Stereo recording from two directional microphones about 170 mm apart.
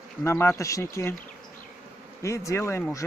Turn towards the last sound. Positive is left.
turn(degrees=15)  # may be behind; listen again after turning